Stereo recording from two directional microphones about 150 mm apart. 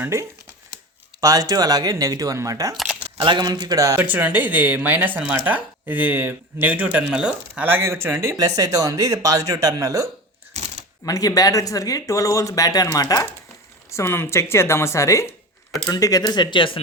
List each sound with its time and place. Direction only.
0.0 s speech: 20° right (ahead or behind)
10.5 s shuffling cards: 50° right (ahead or behind)
11.0 s speech: 25° left (ahead or behind)